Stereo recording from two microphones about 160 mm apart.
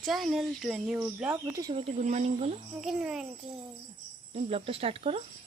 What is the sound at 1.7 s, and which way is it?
Speech, 35° right (ahead or behind).